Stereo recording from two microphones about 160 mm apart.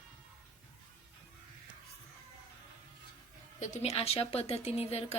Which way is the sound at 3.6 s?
45° left (ahead or behind).